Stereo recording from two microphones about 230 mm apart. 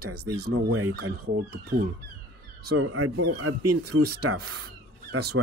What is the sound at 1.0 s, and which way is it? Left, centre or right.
Speech, right.